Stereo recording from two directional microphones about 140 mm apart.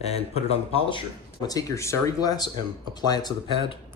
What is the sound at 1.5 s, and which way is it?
Speech, 25° left (ahead or behind).